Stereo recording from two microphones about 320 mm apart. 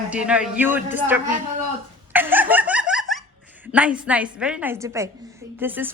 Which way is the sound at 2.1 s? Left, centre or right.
Centre.